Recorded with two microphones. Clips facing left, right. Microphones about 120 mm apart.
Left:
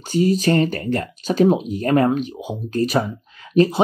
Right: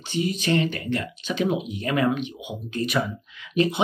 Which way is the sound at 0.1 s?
40° left (ahead or behind).